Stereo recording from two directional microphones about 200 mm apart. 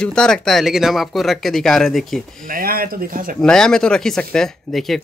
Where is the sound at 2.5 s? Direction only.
45° right (ahead or behind).